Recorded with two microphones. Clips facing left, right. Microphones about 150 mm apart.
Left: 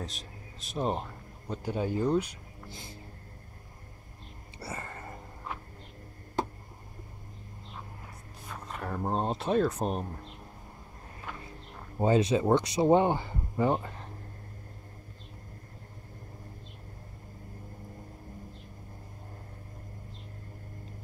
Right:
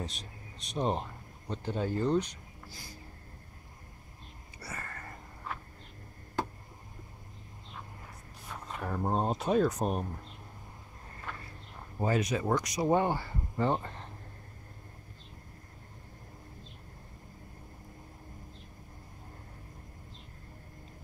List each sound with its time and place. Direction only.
0.0 s speech: centre (ahead or behind)
2.7 s speech: 25° left (ahead or behind)
4.6 s sniff: 25° left (ahead or behind)
8.7 s speech: centre (ahead or behind)
11.3 s a sound: 10° left (ahead or behind)
12.0 s speech: 25° left (ahead or behind); by 14.0 s 5° left (ahead or behind)